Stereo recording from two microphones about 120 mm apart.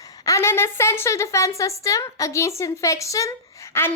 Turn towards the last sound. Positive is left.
turn(degrees=20)  # may be behind; listen again after turning